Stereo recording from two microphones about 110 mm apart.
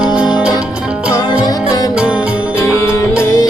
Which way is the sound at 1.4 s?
35° left (ahead or behind).